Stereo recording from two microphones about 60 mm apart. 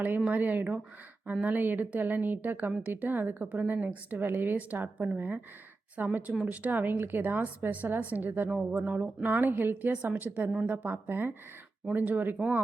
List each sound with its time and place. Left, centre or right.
0.3 s a woman's voice: right